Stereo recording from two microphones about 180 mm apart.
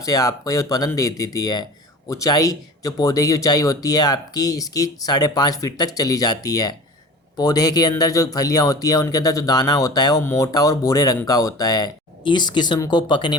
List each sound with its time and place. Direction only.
0.0 s speech: 20° left (ahead or behind)